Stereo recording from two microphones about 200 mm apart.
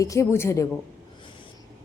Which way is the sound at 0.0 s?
15° left (ahead or behind).